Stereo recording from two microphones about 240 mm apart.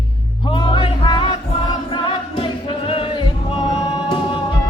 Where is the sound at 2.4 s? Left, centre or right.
Left.